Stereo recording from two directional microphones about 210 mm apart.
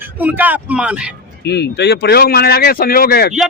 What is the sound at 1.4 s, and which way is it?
Speech, 50° left (ahead or behind).